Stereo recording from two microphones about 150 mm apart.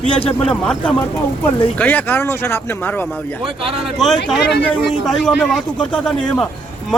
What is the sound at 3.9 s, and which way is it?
A man's voice, centre (ahead or behind).